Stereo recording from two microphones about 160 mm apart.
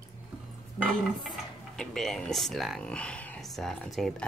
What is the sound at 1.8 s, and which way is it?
Speech, 5° left (ahead or behind).